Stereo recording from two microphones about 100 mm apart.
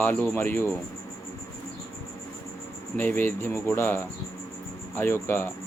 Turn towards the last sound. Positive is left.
turn(degrees=25)  # may be behind; listen again after turning